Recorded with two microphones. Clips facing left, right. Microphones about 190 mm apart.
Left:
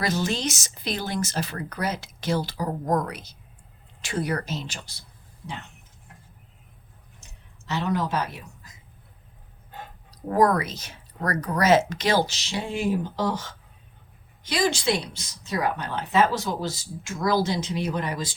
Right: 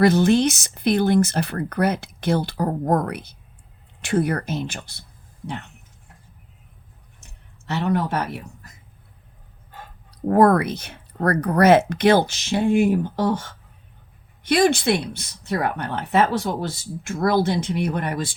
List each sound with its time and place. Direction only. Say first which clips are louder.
0.0 s speech: right 10 dB; 60° right (ahead or behind)
7.7 s speech: right 3 dB; 60° right (ahead or behind)
10.1 s speech: right 5 dB; 60° right (ahead or behind)